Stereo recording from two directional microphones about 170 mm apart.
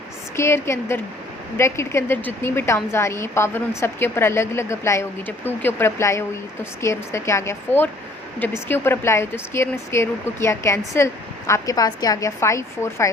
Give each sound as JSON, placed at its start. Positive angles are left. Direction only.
{"t": 0.3, "sound": "speech", "side_deg": 15}